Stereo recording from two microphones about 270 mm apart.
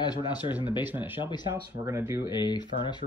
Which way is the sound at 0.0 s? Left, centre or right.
Centre.